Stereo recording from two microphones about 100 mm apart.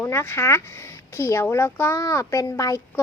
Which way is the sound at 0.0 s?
25° left (ahead or behind).